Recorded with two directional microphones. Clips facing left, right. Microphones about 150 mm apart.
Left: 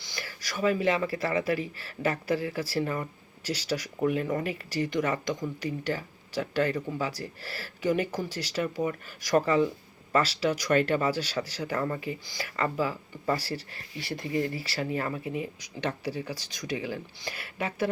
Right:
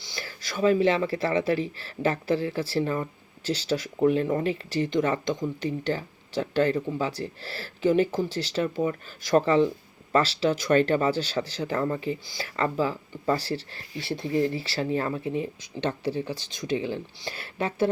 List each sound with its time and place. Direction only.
0.0 s speech: 25° right (ahead or behind)